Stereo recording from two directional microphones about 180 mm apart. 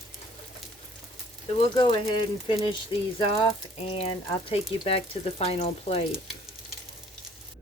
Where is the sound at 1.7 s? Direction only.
25° left (ahead or behind).